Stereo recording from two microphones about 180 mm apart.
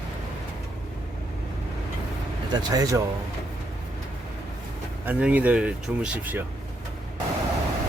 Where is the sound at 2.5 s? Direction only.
20° right (ahead or behind).